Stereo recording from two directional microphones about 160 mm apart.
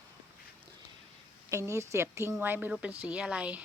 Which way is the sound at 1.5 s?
20° right (ahead or behind).